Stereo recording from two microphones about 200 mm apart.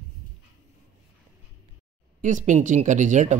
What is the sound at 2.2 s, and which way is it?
Speech, 40° right (ahead or behind).